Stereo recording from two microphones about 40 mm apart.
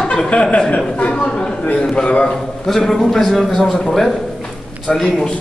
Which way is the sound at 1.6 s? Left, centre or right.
Left.